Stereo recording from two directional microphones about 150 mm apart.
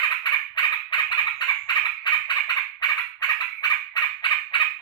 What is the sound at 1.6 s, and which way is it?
Fowl, 30° left (ahead or behind).